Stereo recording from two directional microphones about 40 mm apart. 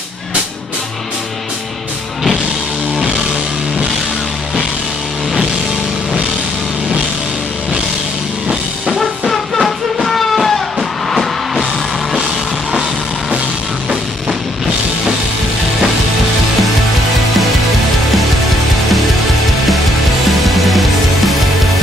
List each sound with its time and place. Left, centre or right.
8.9 s music: centre
20.2 s music: centre